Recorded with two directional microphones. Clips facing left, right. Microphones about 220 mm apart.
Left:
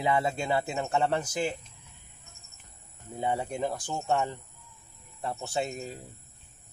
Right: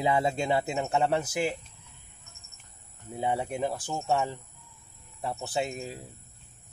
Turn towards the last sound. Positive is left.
turn(degrees=-5)  # may be behind; listen again after turning